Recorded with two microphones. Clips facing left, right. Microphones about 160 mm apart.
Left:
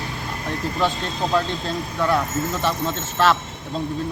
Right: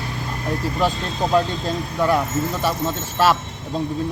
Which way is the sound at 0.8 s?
10° right (ahead or behind).